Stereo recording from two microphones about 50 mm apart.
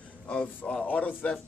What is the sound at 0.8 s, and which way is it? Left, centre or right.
Speech, left.